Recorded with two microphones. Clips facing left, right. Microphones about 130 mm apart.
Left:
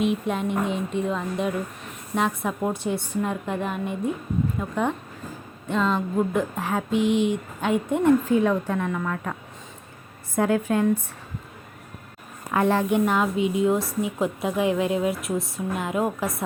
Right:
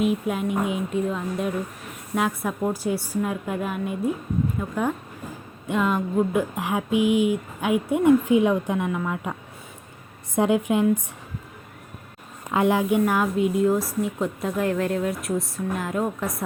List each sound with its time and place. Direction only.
0.0 s a woman's voice: 5° right (ahead or behind)
10.3 s speech: 20° right (ahead or behind)
12.5 s a woman's voice: 15° right (ahead or behind); by 16.4 s 5° left (ahead or behind)